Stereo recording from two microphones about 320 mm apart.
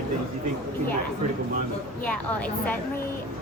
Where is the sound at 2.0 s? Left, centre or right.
Centre.